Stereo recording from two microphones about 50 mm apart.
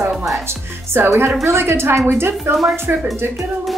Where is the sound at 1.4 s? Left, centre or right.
Right.